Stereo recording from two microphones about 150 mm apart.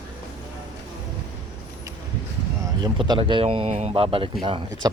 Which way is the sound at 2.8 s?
30° right (ahead or behind).